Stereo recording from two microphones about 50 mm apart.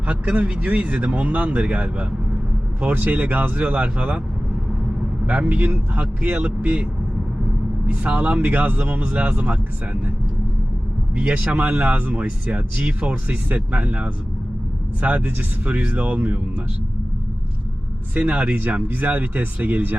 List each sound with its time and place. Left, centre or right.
0.1 s speech: right
5.2 s a man's voice: right
7.9 s speech: right
8.4 s speech: right
11.1 s speech: right
18.1 s speech: right